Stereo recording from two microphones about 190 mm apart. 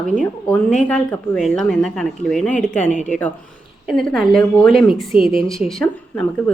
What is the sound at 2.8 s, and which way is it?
Speech, 40° left (ahead or behind).